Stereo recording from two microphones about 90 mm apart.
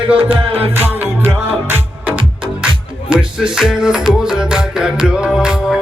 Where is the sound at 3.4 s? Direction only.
10° right (ahead or behind).